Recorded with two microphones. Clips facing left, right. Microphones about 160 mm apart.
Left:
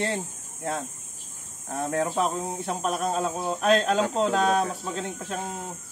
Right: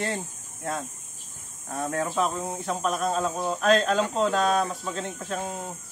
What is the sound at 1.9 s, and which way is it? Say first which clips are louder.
Speech: left 1 dB; 25° left (ahead or behind).